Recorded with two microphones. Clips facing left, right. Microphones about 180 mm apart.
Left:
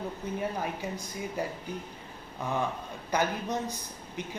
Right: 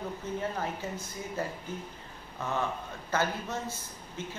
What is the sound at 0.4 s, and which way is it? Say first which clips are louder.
A woman's voice: left 2 dB; 15° left (ahead or behind).